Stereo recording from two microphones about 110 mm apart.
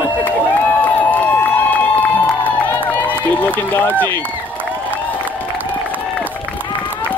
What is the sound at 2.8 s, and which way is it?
Speech, 15° left (ahead or behind).